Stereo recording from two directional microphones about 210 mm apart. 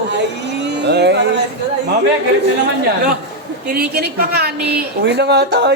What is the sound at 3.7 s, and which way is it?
A woman's voice, 50° right (ahead or behind).